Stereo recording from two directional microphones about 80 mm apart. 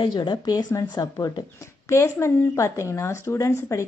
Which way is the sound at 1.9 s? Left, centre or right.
Left.